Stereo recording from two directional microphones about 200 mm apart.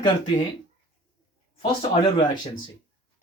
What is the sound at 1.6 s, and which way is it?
Speech, 25° left (ahead or behind).